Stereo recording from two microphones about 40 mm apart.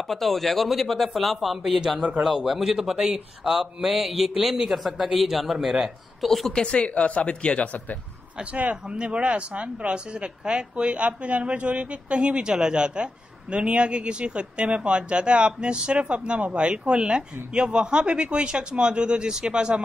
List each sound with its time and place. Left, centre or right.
0.1 s a man's voice: centre
6.2 s speech: centre
6.5 s speech: left
8.8 s a man's voice: right